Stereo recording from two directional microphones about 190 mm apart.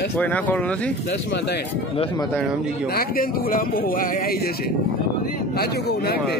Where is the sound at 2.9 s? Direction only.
50° left (ahead or behind).